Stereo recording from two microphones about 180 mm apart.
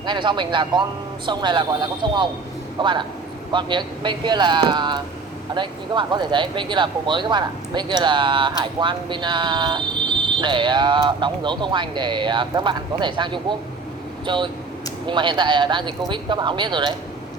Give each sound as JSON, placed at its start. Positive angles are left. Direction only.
{"t": 0.0, "sound": "speech", "side_deg": -25}